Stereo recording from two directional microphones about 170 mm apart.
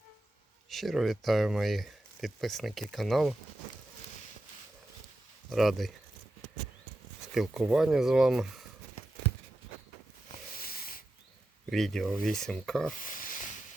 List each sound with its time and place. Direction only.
0.7 s speech: centre (ahead or behind)
5.5 s speech: centre (ahead or behind)
7.3 s speech: centre (ahead or behind)
10.6 s a sound: 60° left (ahead or behind)
11.7 s speech: centre (ahead or behind)
12.9 s a sound: 50° left (ahead or behind)